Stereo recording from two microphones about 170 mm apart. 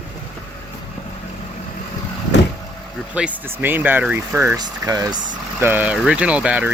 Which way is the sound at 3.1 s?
10° right (ahead or behind).